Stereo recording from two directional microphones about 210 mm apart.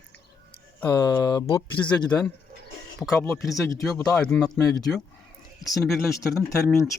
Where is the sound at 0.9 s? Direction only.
20° left (ahead or behind).